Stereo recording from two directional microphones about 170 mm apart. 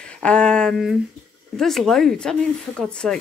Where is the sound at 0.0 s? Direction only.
5° left (ahead or behind).